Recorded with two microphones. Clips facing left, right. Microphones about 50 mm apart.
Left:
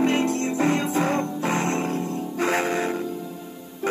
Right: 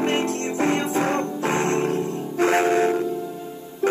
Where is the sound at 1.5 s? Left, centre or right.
Centre.